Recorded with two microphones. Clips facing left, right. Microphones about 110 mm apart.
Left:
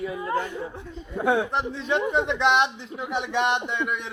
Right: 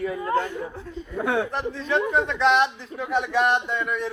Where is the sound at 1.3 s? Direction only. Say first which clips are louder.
Left 2 dB; 20° left (ahead or behind).